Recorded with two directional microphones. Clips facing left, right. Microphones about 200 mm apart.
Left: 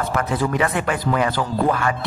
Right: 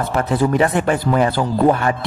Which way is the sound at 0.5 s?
35° right (ahead or behind).